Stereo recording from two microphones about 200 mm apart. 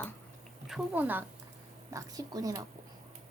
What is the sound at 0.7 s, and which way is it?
Speech, 10° right (ahead or behind).